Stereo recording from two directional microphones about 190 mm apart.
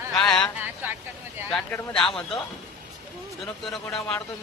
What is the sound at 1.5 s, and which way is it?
Speech, 5° left (ahead or behind).